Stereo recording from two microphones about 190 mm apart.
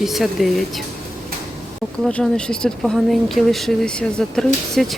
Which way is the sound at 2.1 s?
5° left (ahead or behind).